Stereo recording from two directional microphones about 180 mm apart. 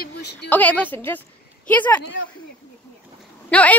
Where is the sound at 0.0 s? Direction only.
65° left (ahead or behind).